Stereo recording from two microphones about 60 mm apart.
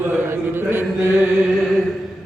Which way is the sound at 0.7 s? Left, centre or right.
Right.